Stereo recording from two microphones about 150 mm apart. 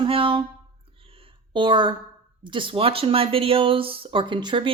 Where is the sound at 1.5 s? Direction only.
30° right (ahead or behind).